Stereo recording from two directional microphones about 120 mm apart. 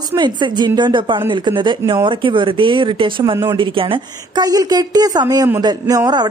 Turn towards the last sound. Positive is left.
turn(degrees=-35)  # may be behind; listen again after turning